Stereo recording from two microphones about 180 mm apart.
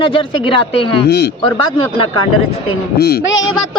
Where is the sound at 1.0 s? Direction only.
65° left (ahead or behind).